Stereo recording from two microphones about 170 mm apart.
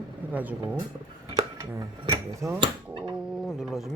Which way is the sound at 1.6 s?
20° right (ahead or behind).